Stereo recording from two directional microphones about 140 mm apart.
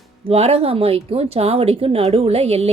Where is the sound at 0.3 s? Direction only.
45° right (ahead or behind).